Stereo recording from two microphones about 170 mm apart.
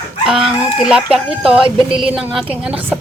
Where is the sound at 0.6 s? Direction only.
5° right (ahead or behind).